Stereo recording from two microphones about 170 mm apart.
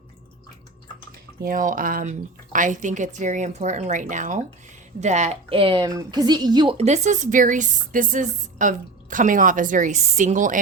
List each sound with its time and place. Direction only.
1.5 s a woman's voice: 50° right (ahead or behind); by 6.7 s 25° right (ahead or behind)
6.7 s speech: 40° right (ahead or behind)